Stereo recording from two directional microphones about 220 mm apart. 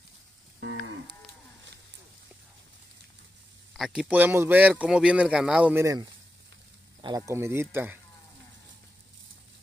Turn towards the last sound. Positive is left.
turn(degrees=-10)  # may be behind; listen again after turning